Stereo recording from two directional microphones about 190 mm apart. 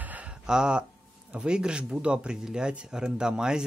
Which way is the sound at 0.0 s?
5° right (ahead or behind).